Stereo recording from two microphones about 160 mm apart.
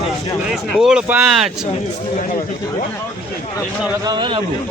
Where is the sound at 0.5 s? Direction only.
5° right (ahead or behind).